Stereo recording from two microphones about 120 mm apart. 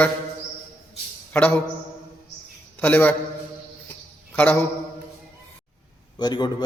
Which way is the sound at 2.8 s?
15° left (ahead or behind).